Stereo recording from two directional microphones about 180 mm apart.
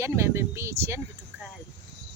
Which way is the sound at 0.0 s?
15° right (ahead or behind).